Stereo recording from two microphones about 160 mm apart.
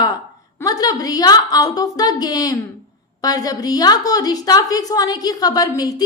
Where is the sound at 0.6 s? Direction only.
25° left (ahead or behind).